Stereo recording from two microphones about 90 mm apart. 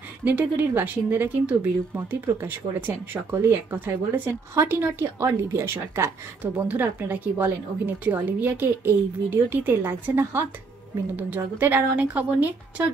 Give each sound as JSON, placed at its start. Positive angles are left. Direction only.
{"t": 0.2, "sound": "a woman's voice", "side_deg": -15}